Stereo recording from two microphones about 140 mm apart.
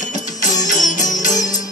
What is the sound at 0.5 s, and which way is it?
Music, 60° left (ahead or behind).